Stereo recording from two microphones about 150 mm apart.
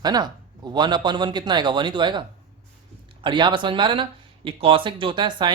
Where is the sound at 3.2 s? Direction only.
30° right (ahead or behind).